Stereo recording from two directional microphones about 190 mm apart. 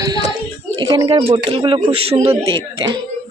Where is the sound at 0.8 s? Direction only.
25° right (ahead or behind).